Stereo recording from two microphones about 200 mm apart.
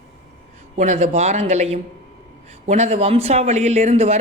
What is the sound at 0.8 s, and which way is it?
Speech, 35° right (ahead or behind).